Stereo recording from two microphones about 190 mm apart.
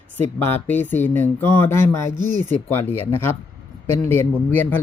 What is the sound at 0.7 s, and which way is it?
A man's voice, 10° left (ahead or behind).